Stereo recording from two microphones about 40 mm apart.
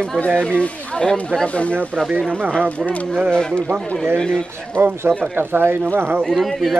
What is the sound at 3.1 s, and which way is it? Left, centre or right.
Speech, centre.